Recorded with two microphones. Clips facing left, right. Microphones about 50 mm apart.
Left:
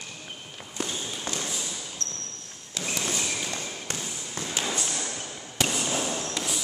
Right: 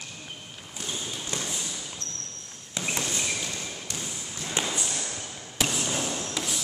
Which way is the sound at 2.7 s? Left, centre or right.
Right.